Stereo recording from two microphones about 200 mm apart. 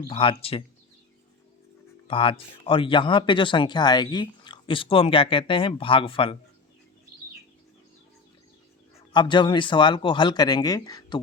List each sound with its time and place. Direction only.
0.1 s speech: 25° left (ahead or behind)
2.0 s speech: 25° left (ahead or behind)
9.1 s speech: 25° left (ahead or behind)